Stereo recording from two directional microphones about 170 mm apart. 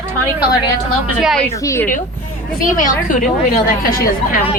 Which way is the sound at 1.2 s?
Centre (ahead or behind).